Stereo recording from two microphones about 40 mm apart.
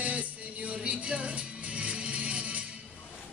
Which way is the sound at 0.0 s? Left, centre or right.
Right.